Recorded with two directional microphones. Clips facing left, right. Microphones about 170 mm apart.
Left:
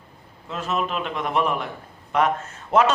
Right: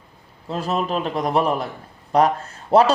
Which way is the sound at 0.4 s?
35° right (ahead or behind).